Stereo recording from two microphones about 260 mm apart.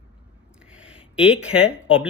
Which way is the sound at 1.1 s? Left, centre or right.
Centre.